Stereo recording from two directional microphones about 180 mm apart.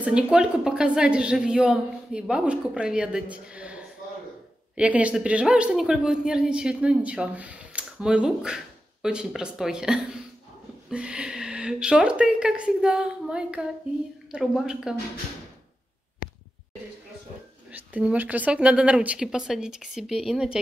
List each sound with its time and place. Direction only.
0.0 s a woman's voice: 5° right (ahead or behind)
16.2 s a sound: 50° left (ahead or behind)
17.6 s a woman's voice: 10° right (ahead or behind)